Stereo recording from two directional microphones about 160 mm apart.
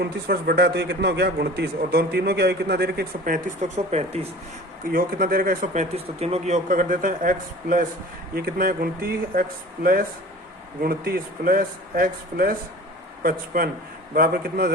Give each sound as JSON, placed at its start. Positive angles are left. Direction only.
{"t": 0.0, "sound": "a man's voice", "side_deg": -80}
{"t": 4.8, "sound": "a man's voice", "side_deg": -60}